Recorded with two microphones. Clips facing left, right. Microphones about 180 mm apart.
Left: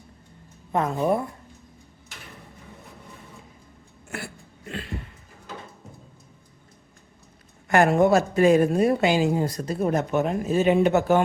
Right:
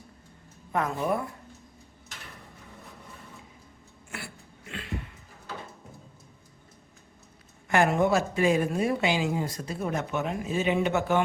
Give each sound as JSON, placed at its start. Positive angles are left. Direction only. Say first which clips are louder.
{"t": 0.7, "sound": "a woman's voice", "louder": "left 5 dB", "side_deg": 25}
{"t": 4.1, "sound": "a sound", "louder": "left 6 dB", "side_deg": 45}
{"t": 7.7, "sound": "speech", "louder": "left 5 dB", "side_deg": 45}